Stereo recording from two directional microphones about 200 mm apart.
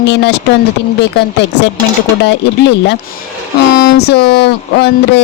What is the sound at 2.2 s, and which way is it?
Speech, 60° left (ahead or behind).